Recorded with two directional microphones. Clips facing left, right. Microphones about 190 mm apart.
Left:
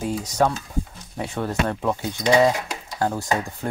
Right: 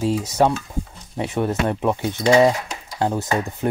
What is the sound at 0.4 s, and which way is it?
Speech, 20° right (ahead or behind).